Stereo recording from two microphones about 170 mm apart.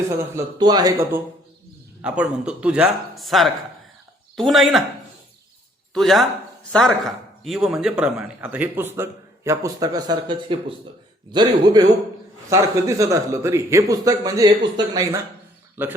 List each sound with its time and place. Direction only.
0.2 s speech: 20° right (ahead or behind)
2.0 s a man's voice: 5° right (ahead or behind)
5.9 s a man's voice: centre (ahead or behind)